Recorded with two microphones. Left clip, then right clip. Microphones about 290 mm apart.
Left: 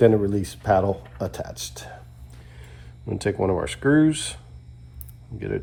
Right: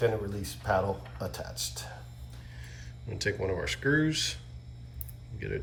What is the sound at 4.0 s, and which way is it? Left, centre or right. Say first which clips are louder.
Speech: left 8 dB; centre.